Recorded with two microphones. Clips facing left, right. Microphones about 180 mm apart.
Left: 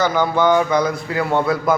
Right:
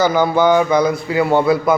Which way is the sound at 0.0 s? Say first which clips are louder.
Right 3 dB; 5° right (ahead or behind).